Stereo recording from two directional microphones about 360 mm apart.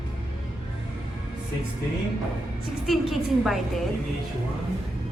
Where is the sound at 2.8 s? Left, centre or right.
Centre.